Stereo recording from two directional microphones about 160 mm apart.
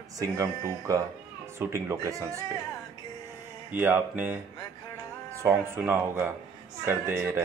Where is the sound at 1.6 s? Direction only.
15° right (ahead or behind).